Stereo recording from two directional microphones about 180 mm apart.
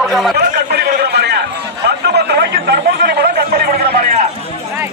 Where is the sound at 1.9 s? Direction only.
65° right (ahead or behind).